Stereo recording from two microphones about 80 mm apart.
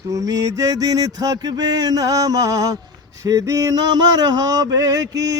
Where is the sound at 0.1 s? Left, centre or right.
Right.